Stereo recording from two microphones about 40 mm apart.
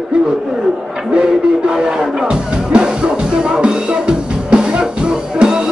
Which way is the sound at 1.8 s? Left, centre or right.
Right.